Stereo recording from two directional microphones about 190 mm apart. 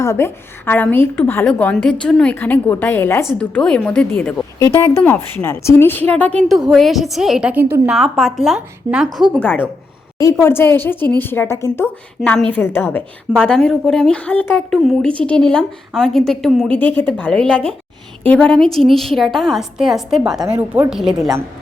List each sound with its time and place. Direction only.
0.0 s a woman's voice: 15° left (ahead or behind); by 20.4 s centre (ahead or behind)
20.4 s a woman's voice: 15° right (ahead or behind)